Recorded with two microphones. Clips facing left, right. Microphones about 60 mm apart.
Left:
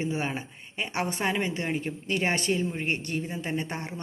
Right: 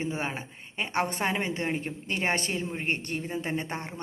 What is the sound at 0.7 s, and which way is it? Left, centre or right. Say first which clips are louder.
Speech: right 1 dB; right.